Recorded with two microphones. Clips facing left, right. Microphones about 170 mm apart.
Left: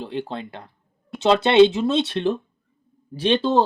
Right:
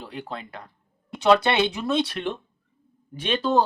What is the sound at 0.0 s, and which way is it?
Speech, 25° left (ahead or behind).